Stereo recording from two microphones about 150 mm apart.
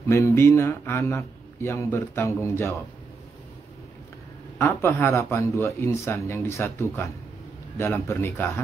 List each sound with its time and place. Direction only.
0.1 s speech: 20° left (ahead or behind)
4.6 s speech: 15° left (ahead or behind)